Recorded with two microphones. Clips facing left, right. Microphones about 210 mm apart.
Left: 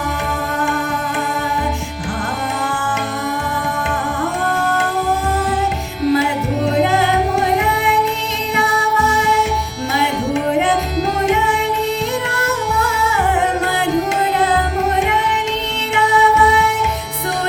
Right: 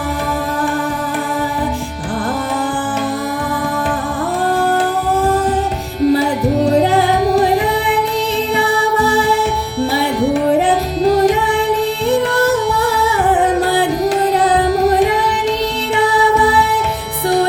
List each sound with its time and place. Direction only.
6.1 s music: 35° right (ahead or behind)
10.7 s music: 35° right (ahead or behind)
14.3 s carnatic music: 35° right (ahead or behind)
16.1 s music: 35° right (ahead or behind)